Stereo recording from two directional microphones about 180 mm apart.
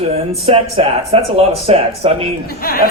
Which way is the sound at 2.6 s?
55° left (ahead or behind).